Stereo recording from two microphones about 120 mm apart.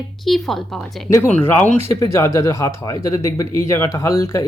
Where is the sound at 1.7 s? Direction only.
55° right (ahead or behind).